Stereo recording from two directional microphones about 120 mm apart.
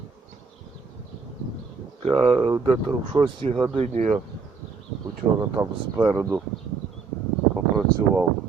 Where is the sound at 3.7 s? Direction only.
65° right (ahead or behind).